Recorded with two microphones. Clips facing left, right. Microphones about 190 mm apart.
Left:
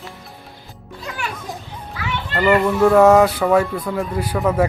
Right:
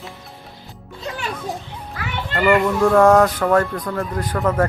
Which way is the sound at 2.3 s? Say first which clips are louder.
Even; centre (ahead or behind).